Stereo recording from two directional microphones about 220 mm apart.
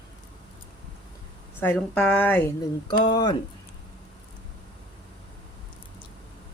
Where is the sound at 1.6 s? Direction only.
5° left (ahead or behind).